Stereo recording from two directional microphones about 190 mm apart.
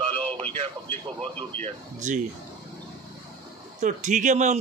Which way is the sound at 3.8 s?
40° right (ahead or behind).